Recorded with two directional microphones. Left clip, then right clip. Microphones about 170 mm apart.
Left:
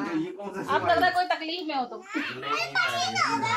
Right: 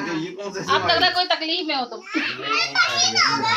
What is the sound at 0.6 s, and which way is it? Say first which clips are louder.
Speech: right 4 dB; 35° left (ahead or behind).